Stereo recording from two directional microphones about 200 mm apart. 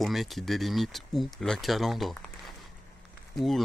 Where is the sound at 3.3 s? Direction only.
Centre (ahead or behind).